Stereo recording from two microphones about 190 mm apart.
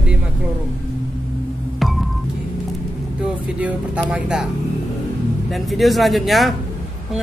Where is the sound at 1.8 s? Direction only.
Centre (ahead or behind).